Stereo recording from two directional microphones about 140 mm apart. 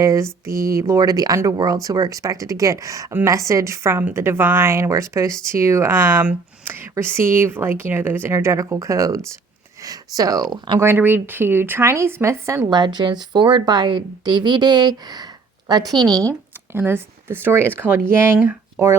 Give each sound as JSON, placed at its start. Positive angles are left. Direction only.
{"t": 0.0, "sound": "speech", "side_deg": -20}
{"t": 10.8, "sound": "speech", "side_deg": -15}
{"t": 16.7, "sound": "speech", "side_deg": -15}